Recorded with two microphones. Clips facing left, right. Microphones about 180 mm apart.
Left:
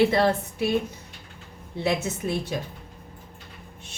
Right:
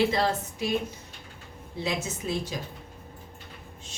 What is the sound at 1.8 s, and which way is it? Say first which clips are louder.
Speech: left 5 dB; 60° left (ahead or behind).